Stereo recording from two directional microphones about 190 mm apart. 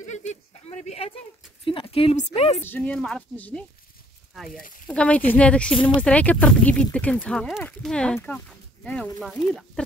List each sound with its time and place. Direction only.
0.1 s a sound: 40° left (ahead or behind)
1.6 s speech: 25° left (ahead or behind)
2.6 s speech: 10° left (ahead or behind)